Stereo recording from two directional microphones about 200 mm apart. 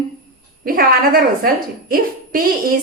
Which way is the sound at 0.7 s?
45° right (ahead or behind).